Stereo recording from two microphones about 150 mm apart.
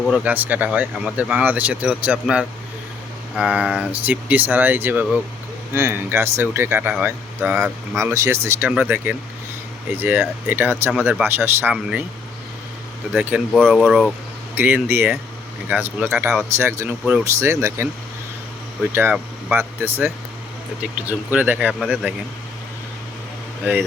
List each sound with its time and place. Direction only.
0.0 s speech: 10° right (ahead or behind)
7.9 s speech: 20° right (ahead or behind)
13.3 s speech: 5° right (ahead or behind)
14.5 s speech: 10° right (ahead or behind)
16.6 s speech: 15° right (ahead or behind)
21.1 s speech: 10° right (ahead or behind)
23.6 s speech: 10° right (ahead or behind)